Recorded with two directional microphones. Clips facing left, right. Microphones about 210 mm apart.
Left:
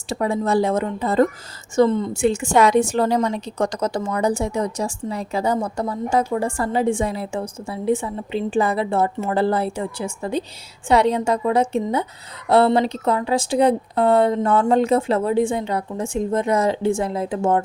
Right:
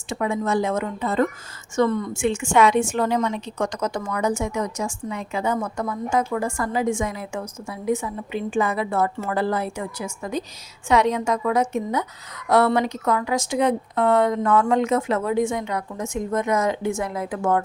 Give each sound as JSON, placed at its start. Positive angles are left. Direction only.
{"t": 0.1, "sound": "a woman's voice", "side_deg": 35}